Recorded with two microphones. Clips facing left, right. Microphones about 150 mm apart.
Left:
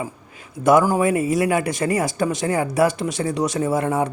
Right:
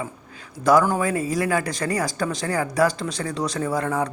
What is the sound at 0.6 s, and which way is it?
Speech, 20° left (ahead or behind).